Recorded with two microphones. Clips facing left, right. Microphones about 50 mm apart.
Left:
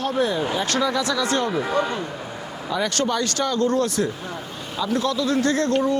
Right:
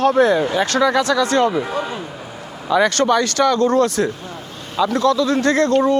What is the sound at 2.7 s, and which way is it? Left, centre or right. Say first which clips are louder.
Speech: right 9 dB; right.